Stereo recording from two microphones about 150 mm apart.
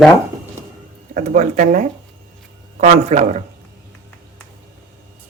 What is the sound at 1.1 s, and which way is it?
Speech, 55° right (ahead or behind).